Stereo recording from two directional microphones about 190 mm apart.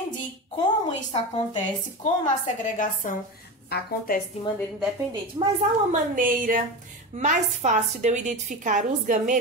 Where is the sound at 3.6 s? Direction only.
55° left (ahead or behind).